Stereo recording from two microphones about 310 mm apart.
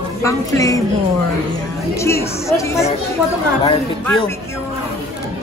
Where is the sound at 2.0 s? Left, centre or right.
Centre.